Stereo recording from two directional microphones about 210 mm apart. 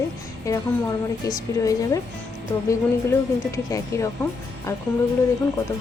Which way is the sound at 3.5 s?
15° left (ahead or behind).